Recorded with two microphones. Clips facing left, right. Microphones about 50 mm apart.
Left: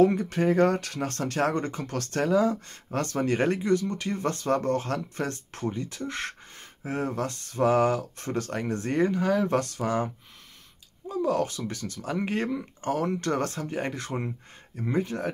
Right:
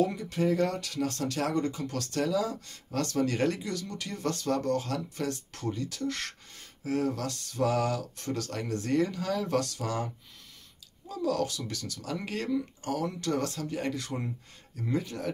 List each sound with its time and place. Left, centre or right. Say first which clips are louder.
0.0 s speech: left 6 dB; left
11.1 s speech: left 4 dB; left